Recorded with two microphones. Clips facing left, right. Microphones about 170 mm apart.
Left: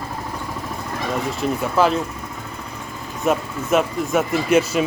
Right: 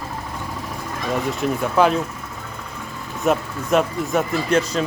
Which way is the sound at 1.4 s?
Centre (ahead or behind).